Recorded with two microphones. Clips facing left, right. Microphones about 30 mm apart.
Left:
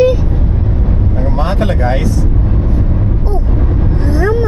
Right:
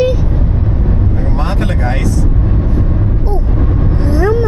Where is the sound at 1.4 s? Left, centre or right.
Centre.